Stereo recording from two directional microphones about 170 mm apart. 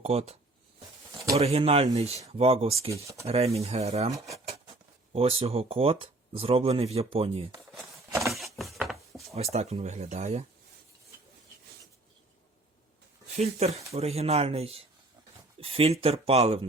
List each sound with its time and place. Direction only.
0.0 s speech: 40° right (ahead or behind)
1.4 s speech: 35° right (ahead or behind)
2.9 s speech: 20° right (ahead or behind)
3.2 s speech: 35° right (ahead or behind)
5.1 s speech: 35° right (ahead or behind)
8.3 s a sound: centre (ahead or behind)
9.3 s speech: 40° right (ahead or behind)
13.3 s speech: 40° right (ahead or behind)